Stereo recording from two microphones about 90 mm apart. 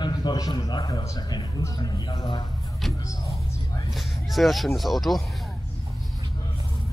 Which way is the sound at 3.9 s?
Centre (ahead or behind).